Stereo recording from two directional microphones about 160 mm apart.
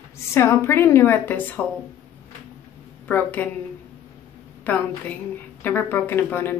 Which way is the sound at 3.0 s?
10° left (ahead or behind).